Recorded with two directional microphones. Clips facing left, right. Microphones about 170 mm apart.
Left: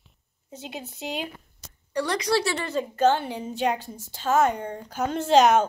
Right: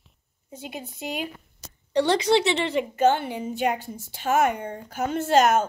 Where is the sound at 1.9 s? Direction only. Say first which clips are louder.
Right 4 dB; 25° right (ahead or behind); by 5.7 s 5° right (ahead or behind).